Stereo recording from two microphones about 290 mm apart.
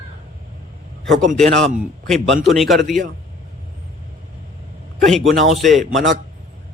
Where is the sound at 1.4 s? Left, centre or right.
Centre.